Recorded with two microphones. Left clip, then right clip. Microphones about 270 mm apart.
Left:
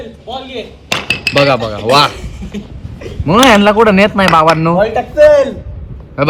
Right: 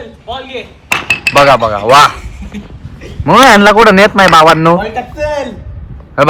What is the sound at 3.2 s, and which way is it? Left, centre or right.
A man's voice, right.